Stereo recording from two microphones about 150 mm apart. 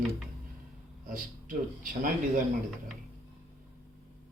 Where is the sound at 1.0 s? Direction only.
60° right (ahead or behind).